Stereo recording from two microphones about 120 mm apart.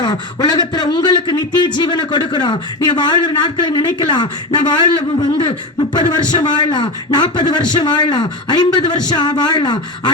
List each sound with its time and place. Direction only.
0.0 s a man's voice: 35° left (ahead or behind)